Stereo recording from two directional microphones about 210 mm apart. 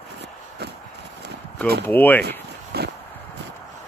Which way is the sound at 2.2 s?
50° right (ahead or behind).